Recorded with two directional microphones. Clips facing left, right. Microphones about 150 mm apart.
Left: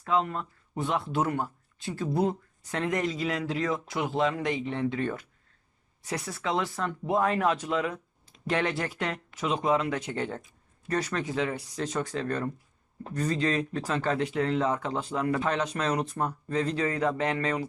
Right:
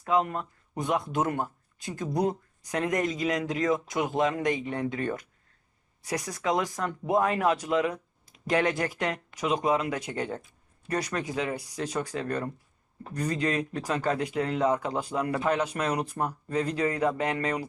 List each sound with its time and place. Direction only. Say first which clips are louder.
0.0 s speech: right 1 dB; 15° right (ahead or behind)
6.1 s speech: right 2 dB; 15° right (ahead or behind)